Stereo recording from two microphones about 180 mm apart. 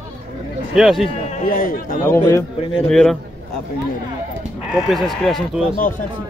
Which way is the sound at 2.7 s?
Centre (ahead or behind).